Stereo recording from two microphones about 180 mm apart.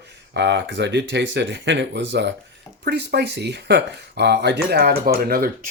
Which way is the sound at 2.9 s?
70° right (ahead or behind).